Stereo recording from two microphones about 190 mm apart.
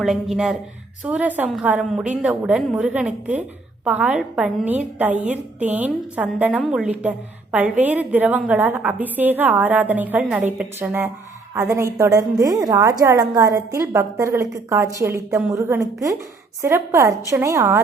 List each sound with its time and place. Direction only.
0.0 s a woman's voice: centre (ahead or behind)